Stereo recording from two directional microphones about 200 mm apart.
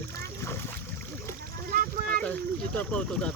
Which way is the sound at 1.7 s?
45° right (ahead or behind).